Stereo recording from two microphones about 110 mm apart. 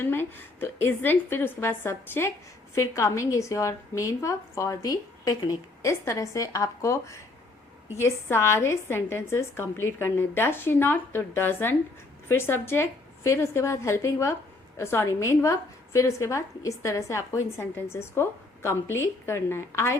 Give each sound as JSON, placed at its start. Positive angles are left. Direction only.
{"t": 0.0, "sound": "a woman's voice", "side_deg": 20}